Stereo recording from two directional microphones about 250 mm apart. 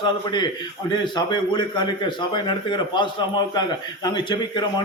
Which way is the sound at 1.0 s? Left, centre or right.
Centre.